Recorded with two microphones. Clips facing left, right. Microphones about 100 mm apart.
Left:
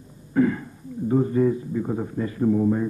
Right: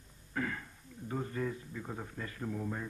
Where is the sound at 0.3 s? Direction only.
15° left (ahead or behind).